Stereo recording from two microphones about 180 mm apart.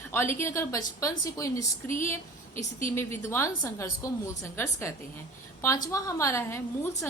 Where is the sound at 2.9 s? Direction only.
15° left (ahead or behind).